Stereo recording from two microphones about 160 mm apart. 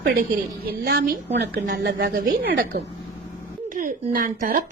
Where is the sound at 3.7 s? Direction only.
55° right (ahead or behind).